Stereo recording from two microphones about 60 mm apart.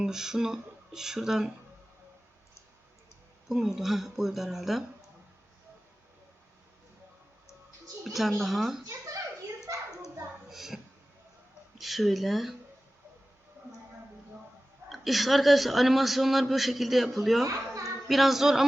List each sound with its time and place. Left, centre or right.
0.0 s speech: centre
3.5 s a man's voice: centre
8.0 s a man's voice: centre
10.5 s speech: centre
11.8 s a man's voice: centre
14.8 s a man's voice: centre
17.4 s a sound: right
18.1 s a man's voice: centre